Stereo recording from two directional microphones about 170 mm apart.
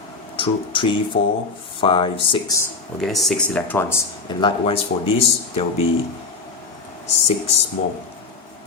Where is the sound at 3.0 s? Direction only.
Centre (ahead or behind).